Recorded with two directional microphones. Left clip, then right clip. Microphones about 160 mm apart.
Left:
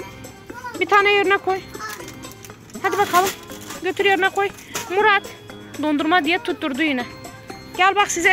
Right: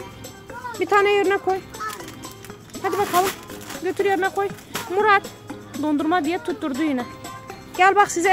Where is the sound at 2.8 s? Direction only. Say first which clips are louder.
Left 3 dB; 5° right (ahead or behind).